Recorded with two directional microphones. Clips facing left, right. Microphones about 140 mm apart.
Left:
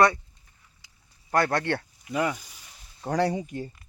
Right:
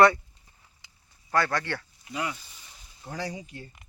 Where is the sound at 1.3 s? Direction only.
50° left (ahead or behind).